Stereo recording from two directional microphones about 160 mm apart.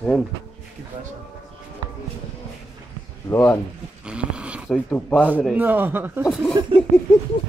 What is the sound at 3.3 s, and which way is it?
Speech, 15° left (ahead or behind).